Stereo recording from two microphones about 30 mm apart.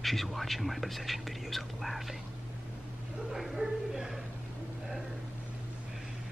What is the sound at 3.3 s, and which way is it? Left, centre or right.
Speech, centre.